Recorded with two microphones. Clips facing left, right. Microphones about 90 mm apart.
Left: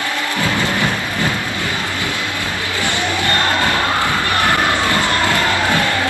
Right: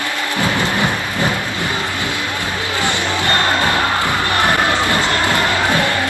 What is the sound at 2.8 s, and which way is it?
Music, 20° right (ahead or behind).